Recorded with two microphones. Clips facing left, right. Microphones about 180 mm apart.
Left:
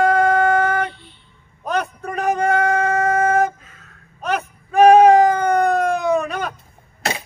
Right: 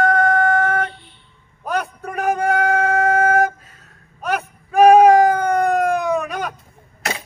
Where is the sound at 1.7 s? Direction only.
10° right (ahead or behind).